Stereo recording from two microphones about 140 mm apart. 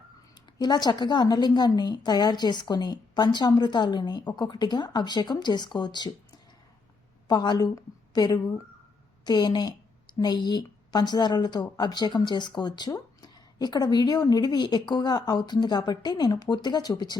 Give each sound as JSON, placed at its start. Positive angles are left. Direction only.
{"t": 0.3, "sound": "a woman's voice", "side_deg": 30}